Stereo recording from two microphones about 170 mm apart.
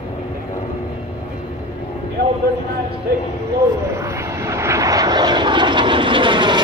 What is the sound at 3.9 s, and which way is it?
Vehicle, 15° right (ahead or behind).